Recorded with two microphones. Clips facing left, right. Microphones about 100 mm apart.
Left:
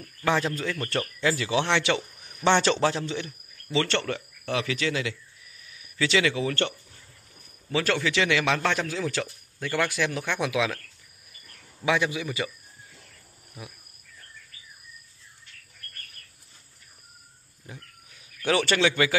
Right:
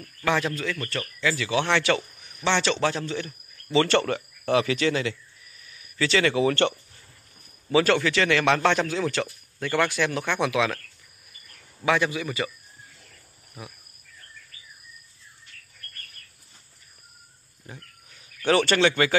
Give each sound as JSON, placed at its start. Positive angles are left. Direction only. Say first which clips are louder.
{"t": 0.6, "sound": "a man's voice", "louder": "left 1 dB", "side_deg": 30}
{"t": 2.4, "sound": "a man's voice", "louder": "left 2 dB", "side_deg": 40}
{"t": 2.8, "sound": "a man's voice", "louder": "even", "side_deg": 20}
{"t": 3.7, "sound": "speech", "louder": "right 5 dB", "side_deg": -10}
{"t": 5.9, "sound": "a man's voice", "louder": "right 1 dB", "side_deg": 10}
{"t": 6.3, "sound": "speech", "louder": "right 6 dB", "side_deg": -75}
{"t": 7.7, "sound": "speech", "louder": "right 5 dB", "side_deg": 0}
{"t": 8.1, "sound": "speech", "louder": "right 3 dB", "side_deg": 10}
{"t": 11.8, "sound": "a man's voice", "louder": "right 2 dB", "side_deg": 15}
{"t": 18.5, "sound": "speech", "louder": "right 3 dB", "side_deg": 5}